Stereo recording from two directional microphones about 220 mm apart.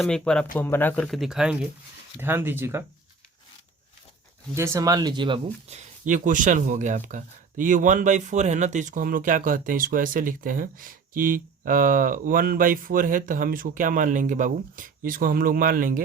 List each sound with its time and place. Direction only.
0.0 s speech: 5° left (ahead or behind)
4.5 s speech: 10° right (ahead or behind); by 16.0 s 40° right (ahead or behind)